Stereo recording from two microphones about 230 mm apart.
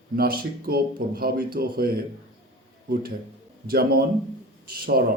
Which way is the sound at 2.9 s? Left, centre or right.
Right.